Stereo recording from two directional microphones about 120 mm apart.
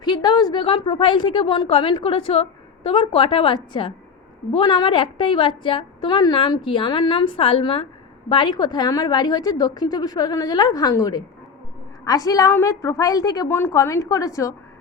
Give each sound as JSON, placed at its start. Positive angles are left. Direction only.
{"t": 0.0, "sound": "a woman's voice", "side_deg": 35}